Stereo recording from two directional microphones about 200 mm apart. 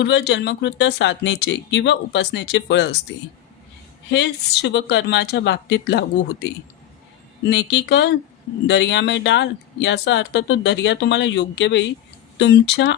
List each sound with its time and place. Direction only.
0.0 s speech: 60° left (ahead or behind)
4.1 s speech: 60° left (ahead or behind)